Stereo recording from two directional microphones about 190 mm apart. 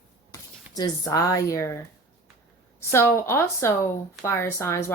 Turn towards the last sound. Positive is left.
turn(degrees=15)  # may be behind; listen again after turning